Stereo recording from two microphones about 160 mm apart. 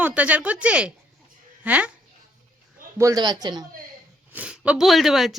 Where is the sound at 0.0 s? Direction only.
10° right (ahead or behind).